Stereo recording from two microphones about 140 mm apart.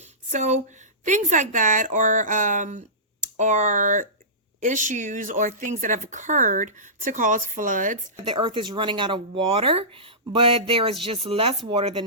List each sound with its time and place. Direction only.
0.0 s a sound: 55° right (ahead or behind)
1.0 s speech: 60° right (ahead or behind)
8.1 s speech: 35° right (ahead or behind)